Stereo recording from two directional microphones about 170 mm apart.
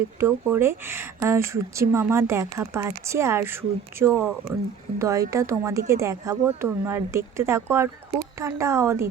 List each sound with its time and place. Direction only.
0.2 s a woman's voice: 15° right (ahead or behind)